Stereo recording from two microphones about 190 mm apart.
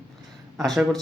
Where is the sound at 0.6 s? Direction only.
Centre (ahead or behind).